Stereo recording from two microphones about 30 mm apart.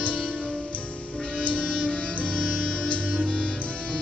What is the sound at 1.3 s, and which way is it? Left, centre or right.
Music, left.